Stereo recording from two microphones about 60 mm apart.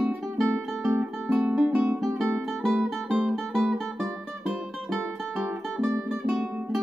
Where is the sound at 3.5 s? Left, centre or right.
Centre.